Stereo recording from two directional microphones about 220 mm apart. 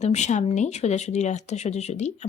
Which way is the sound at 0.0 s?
30° left (ahead or behind).